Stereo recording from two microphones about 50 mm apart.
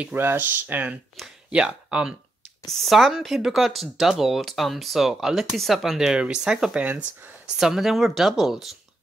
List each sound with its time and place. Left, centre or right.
0.1 s speech: right
1.5 s speech: centre
2.7 s speech: centre
6.8 s speech: right
7.5 s speech: centre